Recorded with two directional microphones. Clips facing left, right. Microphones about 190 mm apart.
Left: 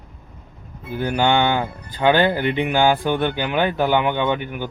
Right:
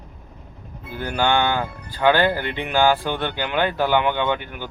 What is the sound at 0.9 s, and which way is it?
Speech, 15° left (ahead or behind).